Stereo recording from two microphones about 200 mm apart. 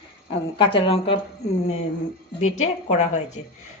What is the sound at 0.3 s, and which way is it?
Speech, 25° left (ahead or behind).